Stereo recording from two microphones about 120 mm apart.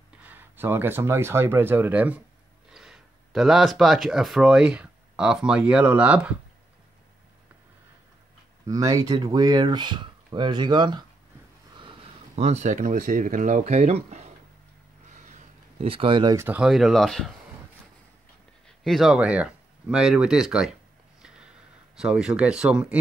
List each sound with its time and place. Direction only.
0.2 s speech: 15° right (ahead or behind)
8.6 s speech: 30° right (ahead or behind)
12.4 s speech: 70° right (ahead or behind)
15.8 s speech: 50° right (ahead or behind)
16.3 s speech: 10° right (ahead or behind)
18.7 s speech: centre (ahead or behind)
21.2 s a sound: 5° right (ahead or behind)